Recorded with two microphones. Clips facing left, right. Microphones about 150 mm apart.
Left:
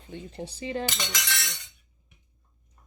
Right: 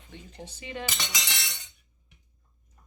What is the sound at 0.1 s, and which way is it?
Cutlery, 35° left (ahead or behind).